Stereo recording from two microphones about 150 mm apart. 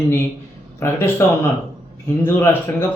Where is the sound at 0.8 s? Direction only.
15° left (ahead or behind).